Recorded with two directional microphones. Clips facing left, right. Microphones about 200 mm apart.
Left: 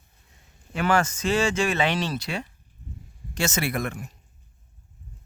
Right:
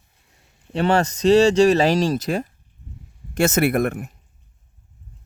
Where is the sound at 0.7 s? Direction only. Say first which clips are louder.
Right 4 dB; 35° right (ahead or behind); by 4.1 s 55° right (ahead or behind).